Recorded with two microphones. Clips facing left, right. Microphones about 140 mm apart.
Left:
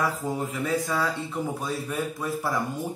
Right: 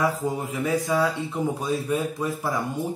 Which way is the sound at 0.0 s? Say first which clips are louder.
Right 3 dB; 15° right (ahead or behind).